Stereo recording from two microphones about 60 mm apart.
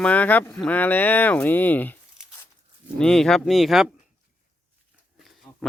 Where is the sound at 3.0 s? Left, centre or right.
Centre.